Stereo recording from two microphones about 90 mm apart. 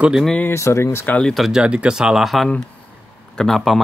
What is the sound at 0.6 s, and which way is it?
Speech, 35° left (ahead or behind).